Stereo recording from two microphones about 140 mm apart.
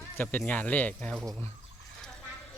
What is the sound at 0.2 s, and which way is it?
Speech, 10° left (ahead or behind).